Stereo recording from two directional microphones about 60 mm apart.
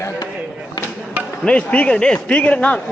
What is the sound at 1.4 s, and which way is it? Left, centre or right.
A man's voice, left.